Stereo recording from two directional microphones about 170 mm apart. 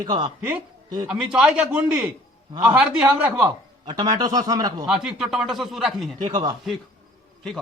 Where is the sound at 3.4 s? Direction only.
25° right (ahead or behind).